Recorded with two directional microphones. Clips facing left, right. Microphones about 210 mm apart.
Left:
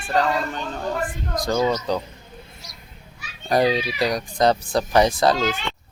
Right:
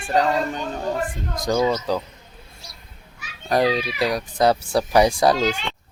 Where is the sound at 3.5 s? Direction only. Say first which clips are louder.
Even; centre (ahead or behind).